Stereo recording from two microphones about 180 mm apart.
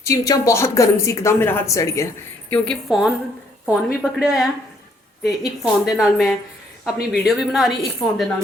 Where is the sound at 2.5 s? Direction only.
Centre (ahead or behind).